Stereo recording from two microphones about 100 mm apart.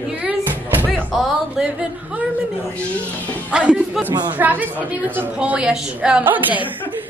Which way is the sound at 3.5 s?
10° right (ahead or behind).